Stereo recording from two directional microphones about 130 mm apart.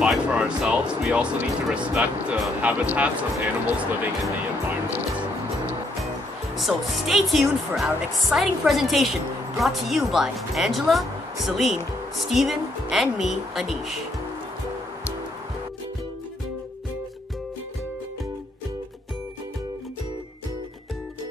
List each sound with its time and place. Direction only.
0.0 s speech: 5° right (ahead or behind)
6.5 s speech: centre (ahead or behind)